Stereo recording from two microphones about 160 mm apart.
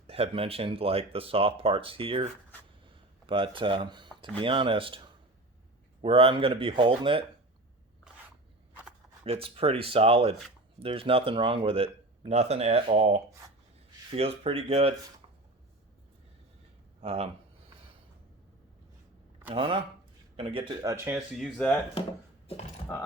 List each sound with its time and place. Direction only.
0.1 s speech: 35° right (ahead or behind)
2.8 s a sound: 30° right (ahead or behind)
4.2 s speech: 30° right (ahead or behind)
9.2 s speech: 35° right (ahead or behind)
14.1 s speech: 35° right (ahead or behind)
17.0 s speech: 35° right (ahead or behind)
19.5 s speech: 30° right (ahead or behind)
20.8 s speech: 15° right (ahead or behind)
21.3 s speech: centre (ahead or behind)